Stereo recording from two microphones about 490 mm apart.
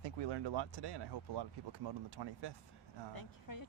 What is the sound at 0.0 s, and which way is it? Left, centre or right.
Speech, right.